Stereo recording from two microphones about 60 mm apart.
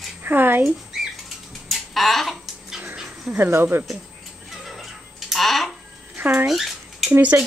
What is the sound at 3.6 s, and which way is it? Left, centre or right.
Speech, right.